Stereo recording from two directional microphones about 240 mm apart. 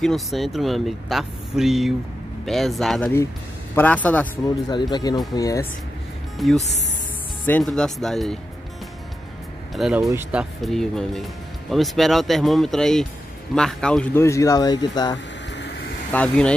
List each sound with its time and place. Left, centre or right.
0.0 s speech: centre
4.6 s speech: centre
6.3 s speech: centre
9.8 s speech: centre
15.5 s vehicle: left
16.1 s speech: centre